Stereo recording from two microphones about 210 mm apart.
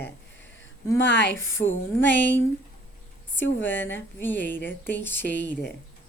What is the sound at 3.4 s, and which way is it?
Speech, 60° left (ahead or behind).